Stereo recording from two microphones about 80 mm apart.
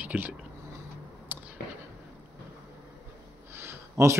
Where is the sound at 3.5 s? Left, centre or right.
Right.